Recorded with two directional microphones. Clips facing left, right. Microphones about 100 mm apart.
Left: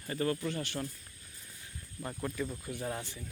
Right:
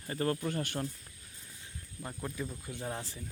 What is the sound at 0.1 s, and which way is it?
Speech, 35° right (ahead or behind).